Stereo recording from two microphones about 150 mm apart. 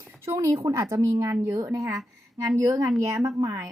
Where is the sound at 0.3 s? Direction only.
20° right (ahead or behind).